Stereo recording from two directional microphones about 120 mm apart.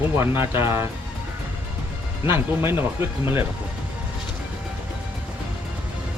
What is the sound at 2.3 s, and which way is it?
Speech, 20° right (ahead or behind).